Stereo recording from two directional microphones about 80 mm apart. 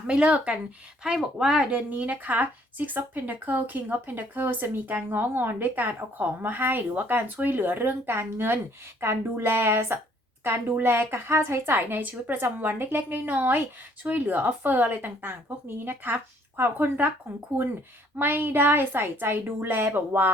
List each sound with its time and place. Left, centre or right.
0.1 s speech: centre
18.2 s speech: right